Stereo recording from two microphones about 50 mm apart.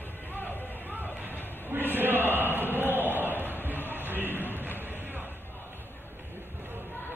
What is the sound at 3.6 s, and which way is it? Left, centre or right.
Music, right.